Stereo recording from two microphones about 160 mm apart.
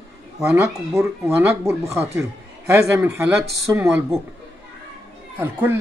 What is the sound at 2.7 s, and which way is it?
Speech, 15° right (ahead or behind).